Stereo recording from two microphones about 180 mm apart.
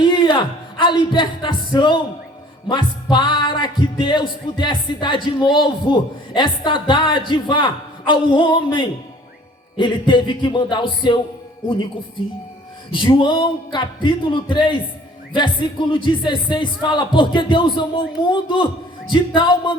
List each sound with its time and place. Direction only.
0.0 s speech: 25° left (ahead or behind)
2.6 s music: 25° left (ahead or behind)
12.9 s music: 25° left (ahead or behind)